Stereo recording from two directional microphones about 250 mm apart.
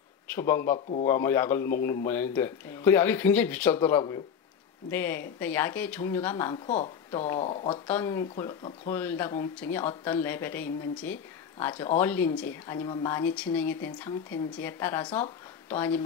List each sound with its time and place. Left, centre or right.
0.3 s a man's voice: centre
7.8 s speech: centre